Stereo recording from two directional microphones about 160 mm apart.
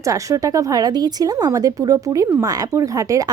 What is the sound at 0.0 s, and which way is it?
Speech, 20° right (ahead or behind).